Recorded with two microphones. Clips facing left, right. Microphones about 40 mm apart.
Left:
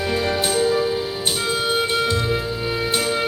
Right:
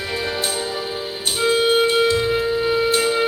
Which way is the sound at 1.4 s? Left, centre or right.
Right.